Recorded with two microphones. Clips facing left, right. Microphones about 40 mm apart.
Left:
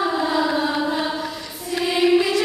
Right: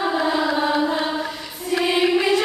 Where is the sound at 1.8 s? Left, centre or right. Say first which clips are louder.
Left 1 dB; right.